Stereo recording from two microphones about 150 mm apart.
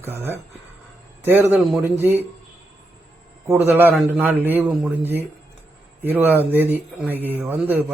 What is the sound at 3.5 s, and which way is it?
Speech, 15° right (ahead or behind).